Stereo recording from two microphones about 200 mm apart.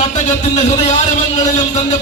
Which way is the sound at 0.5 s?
35° left (ahead or behind).